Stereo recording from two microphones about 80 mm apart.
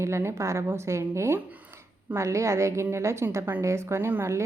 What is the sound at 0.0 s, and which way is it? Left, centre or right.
A woman's voice, right.